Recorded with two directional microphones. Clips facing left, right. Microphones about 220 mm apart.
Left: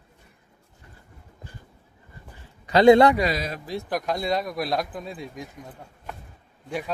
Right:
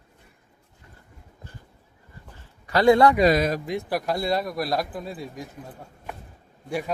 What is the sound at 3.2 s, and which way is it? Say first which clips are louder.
Speech: right 7 dB; 50° right (ahead or behind).